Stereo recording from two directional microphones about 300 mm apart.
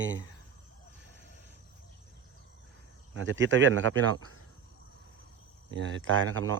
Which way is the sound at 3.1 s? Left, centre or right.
Right.